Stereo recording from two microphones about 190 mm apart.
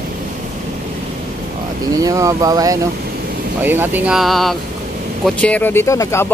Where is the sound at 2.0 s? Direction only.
20° right (ahead or behind).